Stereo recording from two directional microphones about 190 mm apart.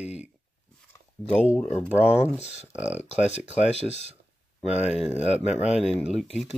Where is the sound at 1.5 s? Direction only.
35° left (ahead or behind).